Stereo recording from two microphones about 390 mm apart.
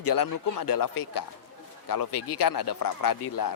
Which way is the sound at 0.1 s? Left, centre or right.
Left.